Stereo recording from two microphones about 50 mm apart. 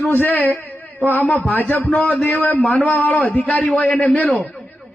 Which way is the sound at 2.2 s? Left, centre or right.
Left.